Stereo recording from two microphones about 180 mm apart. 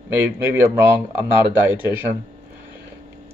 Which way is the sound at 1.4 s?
25° left (ahead or behind).